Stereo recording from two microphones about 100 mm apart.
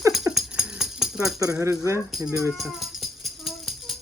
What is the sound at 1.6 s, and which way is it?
Speech, 30° right (ahead or behind).